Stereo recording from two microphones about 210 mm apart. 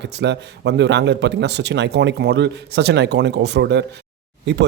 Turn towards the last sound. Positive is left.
turn(degrees=-55)  # may be behind; listen again after turning